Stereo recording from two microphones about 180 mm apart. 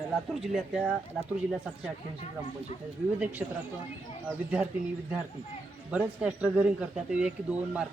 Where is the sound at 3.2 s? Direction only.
10° right (ahead or behind).